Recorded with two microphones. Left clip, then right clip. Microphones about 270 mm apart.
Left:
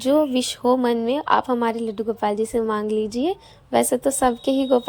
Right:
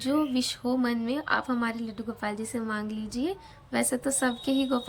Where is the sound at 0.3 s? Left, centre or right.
Centre.